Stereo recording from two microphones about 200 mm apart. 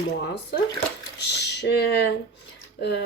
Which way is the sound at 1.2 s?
55° left (ahead or behind).